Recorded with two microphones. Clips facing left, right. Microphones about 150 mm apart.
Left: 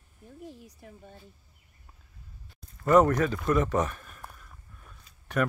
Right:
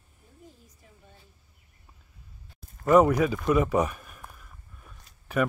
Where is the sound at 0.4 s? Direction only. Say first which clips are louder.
Left 8 dB; 70° left (ahead or behind).